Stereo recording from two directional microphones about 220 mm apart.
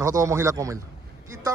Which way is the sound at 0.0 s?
15° right (ahead or behind).